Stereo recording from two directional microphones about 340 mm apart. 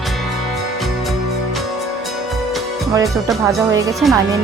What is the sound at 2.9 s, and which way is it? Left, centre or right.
Speech, centre.